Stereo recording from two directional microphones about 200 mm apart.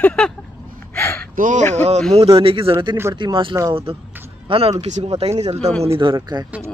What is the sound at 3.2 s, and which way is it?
Speech, 25° right (ahead or behind).